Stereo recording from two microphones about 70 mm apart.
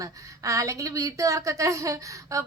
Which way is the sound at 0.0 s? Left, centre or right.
Right.